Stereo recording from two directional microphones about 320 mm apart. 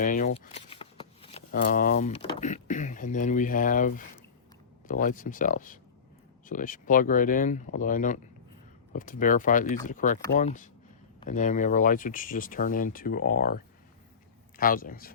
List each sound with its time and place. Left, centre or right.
0.0 s speech: left